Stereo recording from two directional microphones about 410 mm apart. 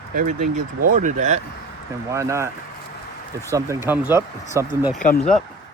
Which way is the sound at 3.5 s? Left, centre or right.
Centre.